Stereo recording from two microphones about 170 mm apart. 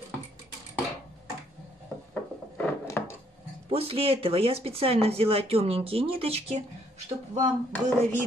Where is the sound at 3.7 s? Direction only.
35° right (ahead or behind).